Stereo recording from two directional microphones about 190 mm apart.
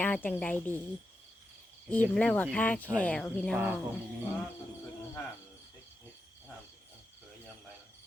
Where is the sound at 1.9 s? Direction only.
5° left (ahead or behind).